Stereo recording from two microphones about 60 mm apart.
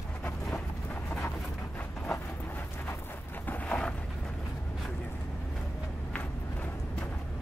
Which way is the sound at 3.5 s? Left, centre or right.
Centre.